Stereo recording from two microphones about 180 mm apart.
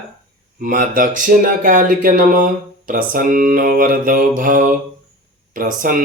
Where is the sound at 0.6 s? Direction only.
50° right (ahead or behind).